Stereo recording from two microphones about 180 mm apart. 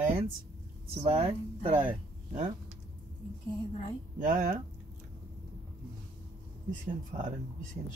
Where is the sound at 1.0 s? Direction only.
35° right (ahead or behind).